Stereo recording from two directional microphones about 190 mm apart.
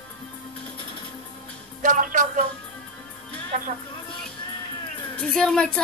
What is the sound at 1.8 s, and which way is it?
Speech, 45° right (ahead or behind).